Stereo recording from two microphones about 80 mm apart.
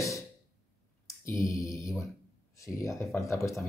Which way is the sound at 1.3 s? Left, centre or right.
Left.